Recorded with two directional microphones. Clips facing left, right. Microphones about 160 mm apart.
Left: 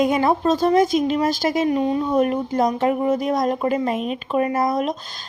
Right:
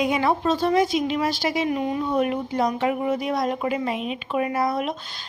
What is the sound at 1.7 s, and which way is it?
A woman's voice, 30° left (ahead or behind).